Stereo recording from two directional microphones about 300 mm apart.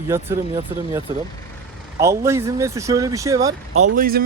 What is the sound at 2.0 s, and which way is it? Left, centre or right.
Speech, centre.